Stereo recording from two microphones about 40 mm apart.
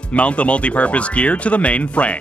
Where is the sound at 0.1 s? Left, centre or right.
Left.